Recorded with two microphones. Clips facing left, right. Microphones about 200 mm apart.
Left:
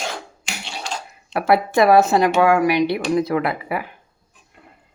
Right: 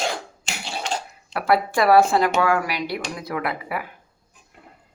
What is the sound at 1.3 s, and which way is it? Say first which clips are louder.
Speech: left 4 dB; 25° left (ahead or behind).